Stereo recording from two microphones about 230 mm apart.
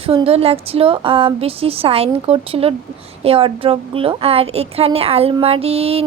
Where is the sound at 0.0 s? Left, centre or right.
Right.